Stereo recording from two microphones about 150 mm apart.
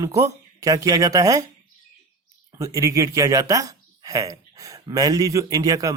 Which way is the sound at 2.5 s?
20° right (ahead or behind).